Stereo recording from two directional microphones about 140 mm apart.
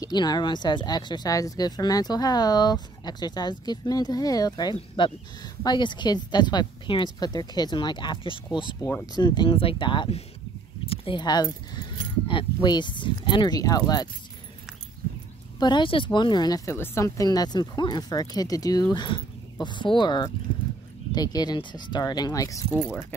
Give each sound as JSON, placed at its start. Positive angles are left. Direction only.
{"t": 0.0, "sound": "a woman's voice", "side_deg": 30}
{"t": 15.6, "sound": "a woman's voice", "side_deg": 35}